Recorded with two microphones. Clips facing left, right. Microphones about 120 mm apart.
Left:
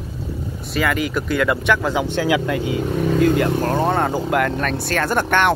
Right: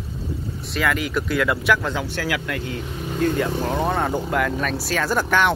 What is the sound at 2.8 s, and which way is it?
Speech, 80° left.